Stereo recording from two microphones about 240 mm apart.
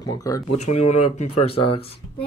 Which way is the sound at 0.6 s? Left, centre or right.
Left.